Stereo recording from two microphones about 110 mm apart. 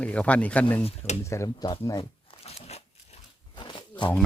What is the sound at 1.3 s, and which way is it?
Speech, 30° left (ahead or behind).